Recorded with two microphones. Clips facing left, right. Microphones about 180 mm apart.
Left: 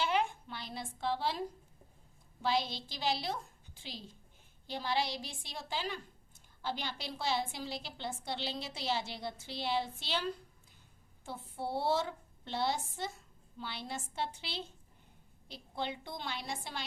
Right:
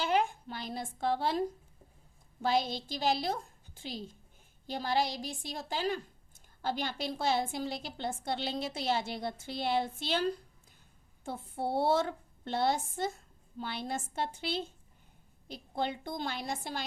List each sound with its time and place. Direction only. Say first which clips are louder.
0.0 s a woman's voice: right 3 dB; 40° right (ahead or behind)
11.3 s a woman's voice: right 4 dB; 55° right (ahead or behind)